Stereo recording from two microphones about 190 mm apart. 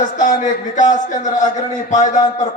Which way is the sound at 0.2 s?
40° left (ahead or behind).